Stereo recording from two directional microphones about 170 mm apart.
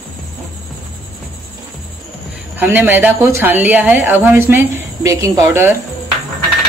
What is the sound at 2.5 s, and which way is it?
A woman's voice, 10° right (ahead or behind).